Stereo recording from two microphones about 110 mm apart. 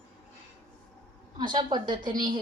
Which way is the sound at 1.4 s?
45° right (ahead or behind).